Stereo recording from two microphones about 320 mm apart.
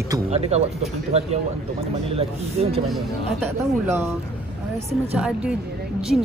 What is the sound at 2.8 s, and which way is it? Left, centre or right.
A woman's voice, centre.